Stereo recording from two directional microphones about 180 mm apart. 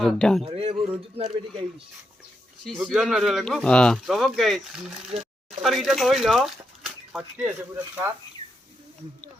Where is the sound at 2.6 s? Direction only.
Centre (ahead or behind).